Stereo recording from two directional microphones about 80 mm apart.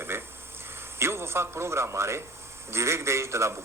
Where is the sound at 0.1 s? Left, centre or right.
Right.